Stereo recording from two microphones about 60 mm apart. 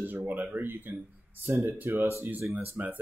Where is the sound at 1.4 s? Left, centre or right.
Right.